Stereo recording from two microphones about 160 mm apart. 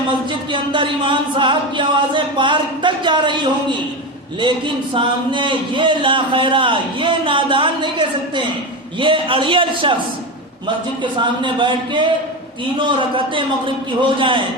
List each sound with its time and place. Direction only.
0.1 s music: 30° right (ahead or behind)
4.4 s a man's voice: 30° right (ahead or behind)
11.0 s music: 30° right (ahead or behind)
12.8 s a man's voice: 30° right (ahead or behind)